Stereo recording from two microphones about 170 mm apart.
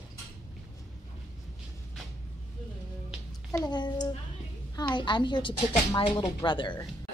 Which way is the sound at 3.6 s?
25° left (ahead or behind).